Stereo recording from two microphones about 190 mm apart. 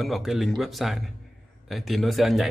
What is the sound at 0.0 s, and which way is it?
A man's voice, centre (ahead or behind).